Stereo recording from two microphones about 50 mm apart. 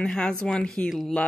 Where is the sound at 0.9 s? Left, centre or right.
Centre.